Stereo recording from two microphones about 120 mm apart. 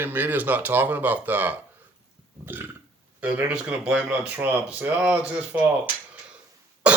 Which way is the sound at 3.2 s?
10° right (ahead or behind).